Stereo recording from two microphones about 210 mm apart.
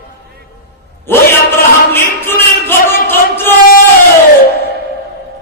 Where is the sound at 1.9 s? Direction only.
10° left (ahead or behind).